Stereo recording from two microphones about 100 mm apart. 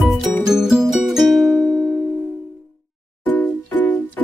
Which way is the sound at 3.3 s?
15° left (ahead or behind).